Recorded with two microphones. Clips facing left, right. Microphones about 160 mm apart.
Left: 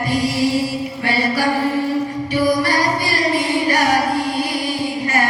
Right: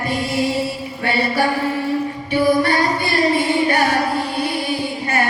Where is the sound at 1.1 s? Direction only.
25° right (ahead or behind).